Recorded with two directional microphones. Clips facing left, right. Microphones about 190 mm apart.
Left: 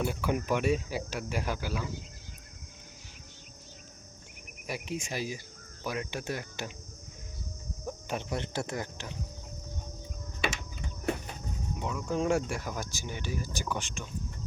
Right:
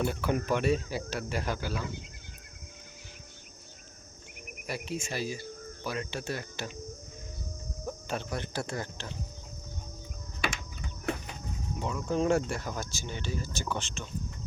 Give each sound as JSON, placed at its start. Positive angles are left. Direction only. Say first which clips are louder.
{"t": 0.0, "sound": "speech", "louder": "right 1 dB", "side_deg": 10}
{"t": 4.6, "sound": "speech", "louder": "even", "side_deg": 15}
{"t": 8.0, "sound": "speech", "louder": "left 1 dB", "side_deg": 15}
{"t": 11.8, "sound": "speech", "louder": "right 2 dB", "side_deg": 0}